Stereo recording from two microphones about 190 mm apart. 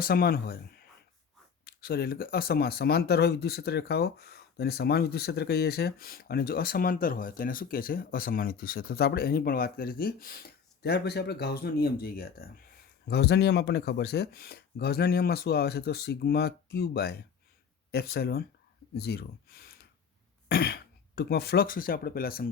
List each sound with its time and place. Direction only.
0.0 s speech: 50° left (ahead or behind)